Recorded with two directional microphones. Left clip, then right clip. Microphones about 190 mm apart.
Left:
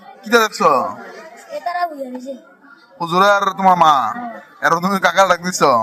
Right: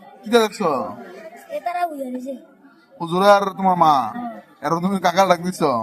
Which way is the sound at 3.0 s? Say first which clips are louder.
Left 2 dB; 5° right (ahead or behind).